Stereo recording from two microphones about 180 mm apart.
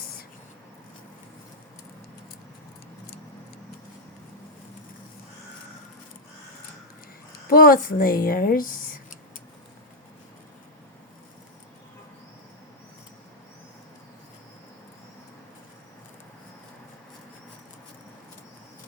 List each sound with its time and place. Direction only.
7.5 s a woman's voice: 50° left (ahead or behind)